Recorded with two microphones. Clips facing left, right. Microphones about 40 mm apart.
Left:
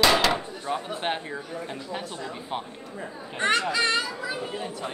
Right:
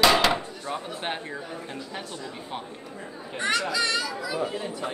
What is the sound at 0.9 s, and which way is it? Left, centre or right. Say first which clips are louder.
A man's voice: left 3 dB; centre.